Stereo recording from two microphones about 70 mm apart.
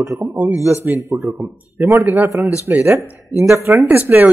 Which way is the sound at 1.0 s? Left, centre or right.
Right.